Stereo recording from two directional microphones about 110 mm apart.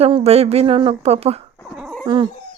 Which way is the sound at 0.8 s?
65° right (ahead or behind).